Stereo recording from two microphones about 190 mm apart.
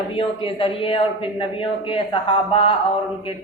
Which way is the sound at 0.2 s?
30° left (ahead or behind).